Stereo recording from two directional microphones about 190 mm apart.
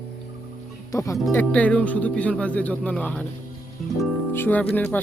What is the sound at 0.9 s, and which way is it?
Speech, 15° left (ahead or behind).